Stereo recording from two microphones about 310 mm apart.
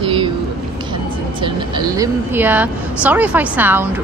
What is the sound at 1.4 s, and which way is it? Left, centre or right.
A woman's voice, centre.